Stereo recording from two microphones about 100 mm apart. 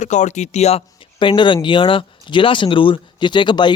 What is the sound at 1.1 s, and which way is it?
Speech, 55° left (ahead or behind).